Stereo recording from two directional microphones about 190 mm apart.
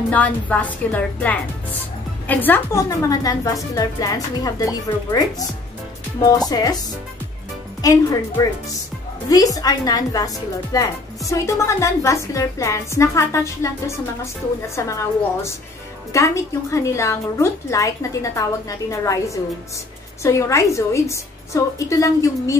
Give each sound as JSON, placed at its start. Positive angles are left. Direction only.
{"t": 0.1, "sound": "a woman's voice", "side_deg": 10}
{"t": 6.5, "sound": "a woman's voice", "side_deg": 20}
{"t": 7.8, "sound": "a woman's voice", "side_deg": 20}
{"t": 16.1, "sound": "a woman's voice", "side_deg": 15}